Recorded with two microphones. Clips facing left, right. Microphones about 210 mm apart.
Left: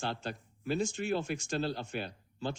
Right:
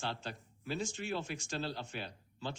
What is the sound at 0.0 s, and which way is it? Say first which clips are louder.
Speech: left 4 dB; 50° left (ahead or behind).